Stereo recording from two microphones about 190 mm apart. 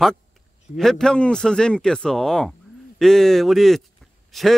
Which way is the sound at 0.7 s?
Centre (ahead or behind).